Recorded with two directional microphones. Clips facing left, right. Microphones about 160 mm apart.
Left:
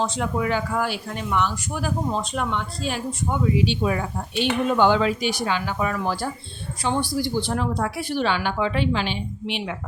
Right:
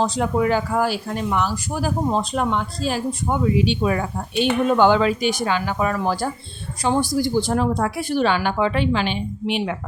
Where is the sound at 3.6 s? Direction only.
55° right (ahead or behind).